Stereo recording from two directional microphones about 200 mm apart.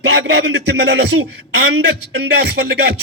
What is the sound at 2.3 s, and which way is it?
Music, 55° right (ahead or behind).